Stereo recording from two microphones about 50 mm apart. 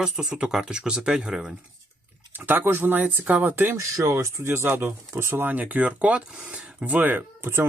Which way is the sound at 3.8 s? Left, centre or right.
Right.